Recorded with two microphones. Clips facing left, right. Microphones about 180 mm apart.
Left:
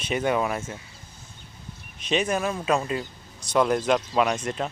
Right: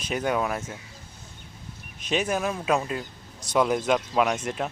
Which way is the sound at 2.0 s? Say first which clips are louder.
Left 1 dB; 5° right (ahead or behind).